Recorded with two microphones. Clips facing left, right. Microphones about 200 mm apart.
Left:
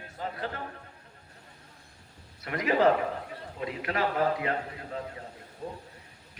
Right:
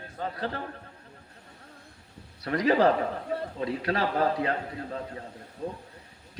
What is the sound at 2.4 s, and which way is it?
Speech, 35° right (ahead or behind).